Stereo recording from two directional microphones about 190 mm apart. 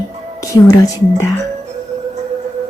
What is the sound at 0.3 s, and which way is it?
Speech, 15° left (ahead or behind).